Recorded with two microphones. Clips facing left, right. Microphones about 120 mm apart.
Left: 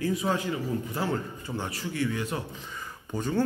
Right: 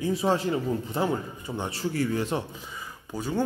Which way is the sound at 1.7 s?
35° right (ahead or behind).